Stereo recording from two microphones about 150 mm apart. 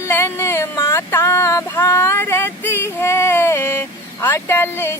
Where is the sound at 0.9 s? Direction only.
15° left (ahead or behind).